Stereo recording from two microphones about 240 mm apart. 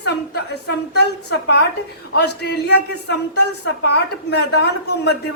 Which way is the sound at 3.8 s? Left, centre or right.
Left.